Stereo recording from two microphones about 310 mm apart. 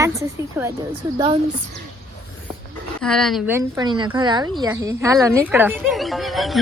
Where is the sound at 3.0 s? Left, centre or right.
Centre.